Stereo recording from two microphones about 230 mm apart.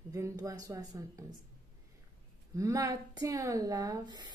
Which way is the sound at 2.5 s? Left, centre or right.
Centre.